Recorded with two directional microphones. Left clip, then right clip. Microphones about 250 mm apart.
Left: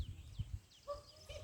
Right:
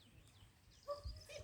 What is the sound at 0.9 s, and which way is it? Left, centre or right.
Dog, right.